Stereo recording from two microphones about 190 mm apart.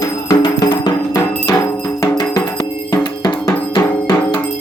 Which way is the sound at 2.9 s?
20° left (ahead or behind).